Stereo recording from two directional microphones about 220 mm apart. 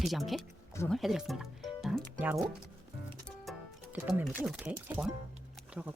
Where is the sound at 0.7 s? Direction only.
10° left (ahead or behind).